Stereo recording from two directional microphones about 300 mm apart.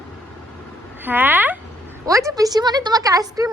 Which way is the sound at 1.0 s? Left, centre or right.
Centre.